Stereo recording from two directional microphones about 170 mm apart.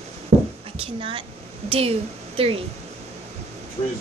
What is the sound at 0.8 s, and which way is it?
A woman's voice, 30° right (ahead or behind).